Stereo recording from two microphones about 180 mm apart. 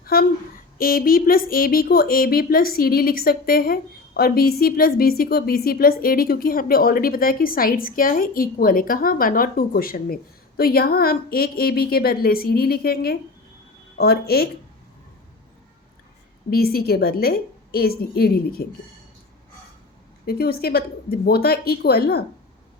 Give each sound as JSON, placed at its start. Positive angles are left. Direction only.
{"t": 0.0, "sound": "speech", "side_deg": 55}
{"t": 16.5, "sound": "speech", "side_deg": 55}
{"t": 20.2, "sound": "speech", "side_deg": 60}